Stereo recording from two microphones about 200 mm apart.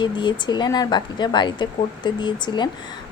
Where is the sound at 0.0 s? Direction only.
20° left (ahead or behind).